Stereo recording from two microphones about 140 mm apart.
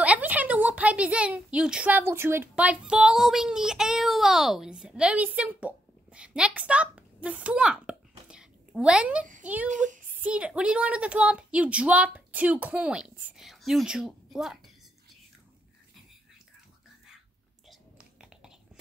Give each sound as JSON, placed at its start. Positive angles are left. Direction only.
{"t": 0.0, "sound": "a woman's voice", "side_deg": -10}
{"t": 9.7, "sound": "speech", "side_deg": -60}
{"t": 10.2, "sound": "a woman's voice", "side_deg": -10}
{"t": 17.6, "sound": "whispering", "side_deg": -5}